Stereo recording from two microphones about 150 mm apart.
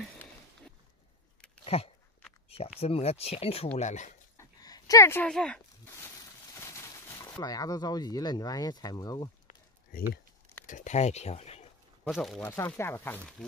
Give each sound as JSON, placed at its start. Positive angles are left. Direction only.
{"t": 1.6, "sound": "a sound", "side_deg": 40}
{"t": 2.8, "sound": "speech", "side_deg": 40}
{"t": 4.4, "sound": "a sound", "side_deg": 25}
{"t": 5.2, "sound": "speech", "side_deg": 5}
{"t": 5.9, "sound": "speech", "side_deg": 20}
{"t": 10.7, "sound": "speech", "side_deg": 55}
{"t": 12.1, "sound": "speech", "side_deg": 0}
{"t": 12.4, "sound": "speech", "side_deg": 15}